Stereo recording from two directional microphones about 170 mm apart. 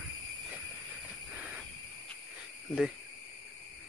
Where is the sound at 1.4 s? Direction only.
5° right (ahead or behind).